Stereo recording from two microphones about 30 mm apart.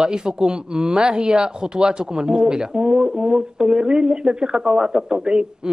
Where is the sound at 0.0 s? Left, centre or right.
Right.